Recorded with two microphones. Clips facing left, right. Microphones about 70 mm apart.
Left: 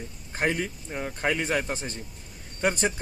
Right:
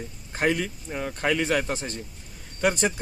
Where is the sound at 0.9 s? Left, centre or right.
Centre.